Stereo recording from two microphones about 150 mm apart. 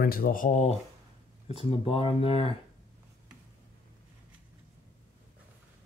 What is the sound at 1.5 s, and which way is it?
Speech, 40° left (ahead or behind).